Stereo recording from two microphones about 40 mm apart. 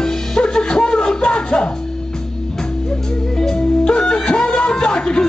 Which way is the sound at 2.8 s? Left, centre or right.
Centre.